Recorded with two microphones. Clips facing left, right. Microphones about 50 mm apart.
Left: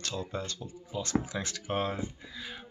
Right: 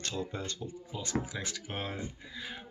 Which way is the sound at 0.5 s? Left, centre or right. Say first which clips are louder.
Left 3 dB; centre.